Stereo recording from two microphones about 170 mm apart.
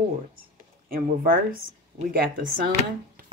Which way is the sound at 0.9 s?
55° right (ahead or behind).